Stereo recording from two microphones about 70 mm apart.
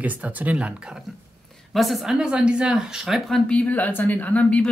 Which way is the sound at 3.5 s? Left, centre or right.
Left.